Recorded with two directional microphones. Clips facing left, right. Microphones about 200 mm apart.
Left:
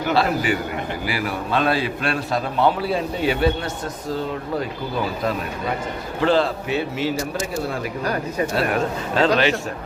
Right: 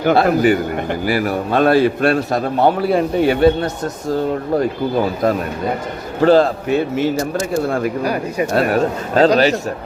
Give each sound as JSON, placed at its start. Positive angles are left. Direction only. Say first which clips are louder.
{"t": 0.0, "sound": "a man's voice", "louder": "right 7 dB", "side_deg": -55}
{"t": 6.1, "sound": "a man's voice", "louder": "right 7 dB", "side_deg": -45}
{"t": 8.0, "sound": "speech", "louder": "right 4 dB", "side_deg": -10}
{"t": 8.5, "sound": "a man's voice", "louder": "right 8 dB", "side_deg": -40}